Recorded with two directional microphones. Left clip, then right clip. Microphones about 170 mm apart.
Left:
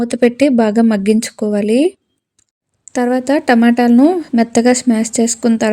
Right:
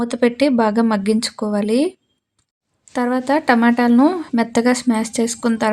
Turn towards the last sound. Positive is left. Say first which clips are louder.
# left 5 dB
turn(degrees=45)  # may be behind; listen again after turning